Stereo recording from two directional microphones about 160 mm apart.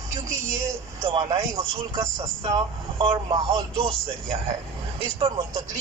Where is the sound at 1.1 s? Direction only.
25° right (ahead or behind).